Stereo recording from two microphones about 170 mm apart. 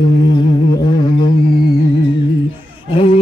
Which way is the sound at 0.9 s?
25° left (ahead or behind).